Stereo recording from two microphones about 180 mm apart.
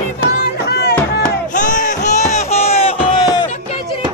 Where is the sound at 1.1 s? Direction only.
45° left (ahead or behind).